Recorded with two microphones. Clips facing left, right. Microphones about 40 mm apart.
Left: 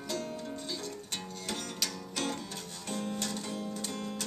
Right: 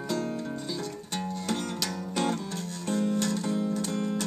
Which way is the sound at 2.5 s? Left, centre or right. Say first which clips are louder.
Right 7 dB; centre.